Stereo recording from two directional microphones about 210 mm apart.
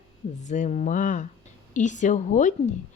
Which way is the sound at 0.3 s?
35° left (ahead or behind).